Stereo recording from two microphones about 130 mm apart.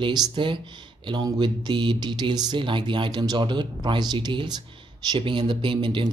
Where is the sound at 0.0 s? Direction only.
35° right (ahead or behind).